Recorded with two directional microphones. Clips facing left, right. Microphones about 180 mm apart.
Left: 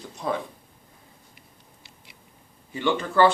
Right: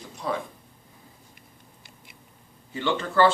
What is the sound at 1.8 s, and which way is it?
Patter, 50° right (ahead or behind).